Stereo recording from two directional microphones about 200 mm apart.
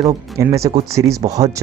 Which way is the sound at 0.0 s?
15° right (ahead or behind).